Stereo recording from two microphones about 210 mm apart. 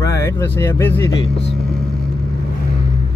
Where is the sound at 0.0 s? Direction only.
15° left (ahead or behind).